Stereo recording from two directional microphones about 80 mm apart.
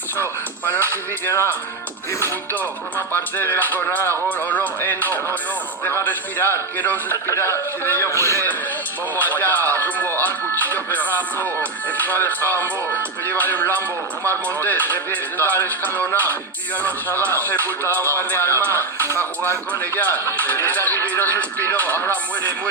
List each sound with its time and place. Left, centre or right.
0.6 s music: left
3.1 s speech: left
7.3 s a man's voice: left